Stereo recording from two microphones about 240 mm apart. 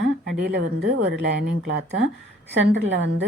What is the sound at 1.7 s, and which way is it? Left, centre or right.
Speech, right.